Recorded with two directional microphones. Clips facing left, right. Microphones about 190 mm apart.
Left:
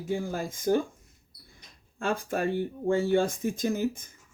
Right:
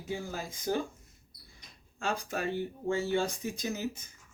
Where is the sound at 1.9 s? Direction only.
50° left (ahead or behind).